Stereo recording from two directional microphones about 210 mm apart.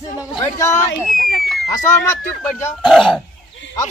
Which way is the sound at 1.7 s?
10° left (ahead or behind).